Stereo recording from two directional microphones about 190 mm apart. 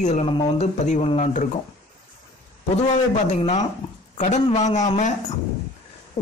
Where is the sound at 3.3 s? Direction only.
35° left (ahead or behind).